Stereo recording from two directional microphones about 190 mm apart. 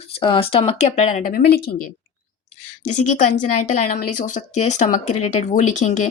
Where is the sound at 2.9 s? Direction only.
40° left (ahead or behind).